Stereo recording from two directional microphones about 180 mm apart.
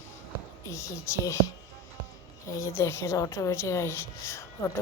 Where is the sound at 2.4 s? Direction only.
15° left (ahead or behind).